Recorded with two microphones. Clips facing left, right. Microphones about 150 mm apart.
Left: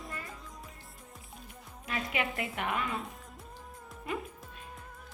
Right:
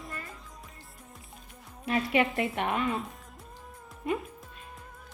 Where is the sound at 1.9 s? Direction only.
25° right (ahead or behind).